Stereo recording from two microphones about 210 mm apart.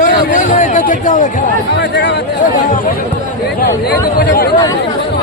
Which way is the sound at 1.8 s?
55° left (ahead or behind).